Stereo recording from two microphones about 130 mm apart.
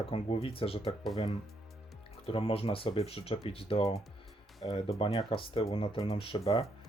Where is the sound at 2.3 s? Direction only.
45° left (ahead or behind).